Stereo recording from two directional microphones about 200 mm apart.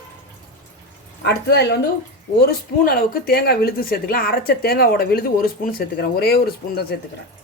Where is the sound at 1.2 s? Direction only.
55° left (ahead or behind).